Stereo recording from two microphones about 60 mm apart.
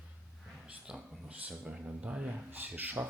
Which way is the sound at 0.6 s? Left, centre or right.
Centre.